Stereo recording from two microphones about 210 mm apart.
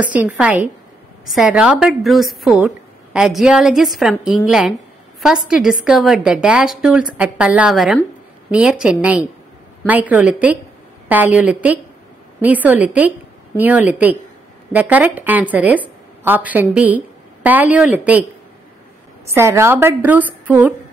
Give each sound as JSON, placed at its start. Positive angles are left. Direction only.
{"t": 0.0, "sound": "a woman's voice", "side_deg": -5}
{"t": 19.2, "sound": "a woman's voice", "side_deg": -15}